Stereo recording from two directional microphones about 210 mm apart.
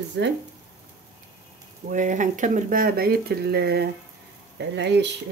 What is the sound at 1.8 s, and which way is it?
Speech, 35° right (ahead or behind).